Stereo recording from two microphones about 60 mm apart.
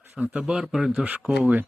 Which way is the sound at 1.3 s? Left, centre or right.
Right.